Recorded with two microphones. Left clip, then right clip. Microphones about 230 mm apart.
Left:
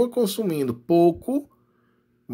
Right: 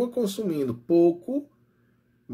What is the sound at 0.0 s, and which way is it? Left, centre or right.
Speech, left.